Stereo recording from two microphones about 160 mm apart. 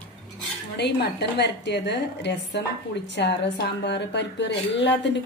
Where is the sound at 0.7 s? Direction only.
90° left.